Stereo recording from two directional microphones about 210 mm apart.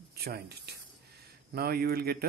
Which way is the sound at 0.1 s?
45° right (ahead or behind).